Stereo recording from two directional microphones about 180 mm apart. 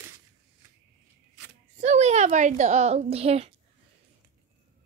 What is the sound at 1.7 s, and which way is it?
A woman's voice, 40° right (ahead or behind).